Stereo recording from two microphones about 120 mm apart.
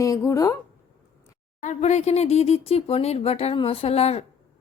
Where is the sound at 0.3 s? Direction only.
25° left (ahead or behind).